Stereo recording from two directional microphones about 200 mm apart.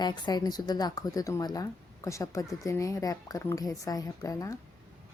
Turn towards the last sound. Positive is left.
turn(degrees=15)  # may be behind; listen again after turning